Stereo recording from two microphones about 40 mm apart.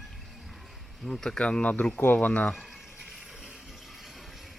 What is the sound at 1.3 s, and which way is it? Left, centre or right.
Speech, left.